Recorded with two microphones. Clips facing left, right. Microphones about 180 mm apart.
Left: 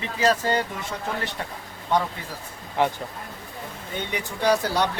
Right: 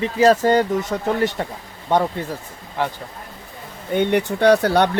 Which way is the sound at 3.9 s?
60° right (ahead or behind).